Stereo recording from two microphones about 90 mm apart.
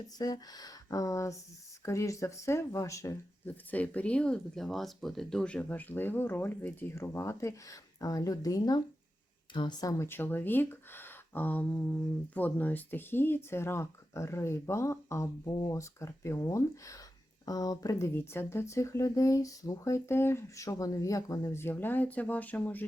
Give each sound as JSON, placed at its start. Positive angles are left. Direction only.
{"t": 0.2, "sound": "speech", "side_deg": 45}
{"t": 3.4, "sound": "speech", "side_deg": 15}
{"t": 9.5, "sound": "speech", "side_deg": 60}
{"t": 9.8, "sound": "speech", "side_deg": 30}
{"t": 15.4, "sound": "speech", "side_deg": 50}
{"t": 18.1, "sound": "speech", "side_deg": 25}
{"t": 21.5, "sound": "speech", "side_deg": 25}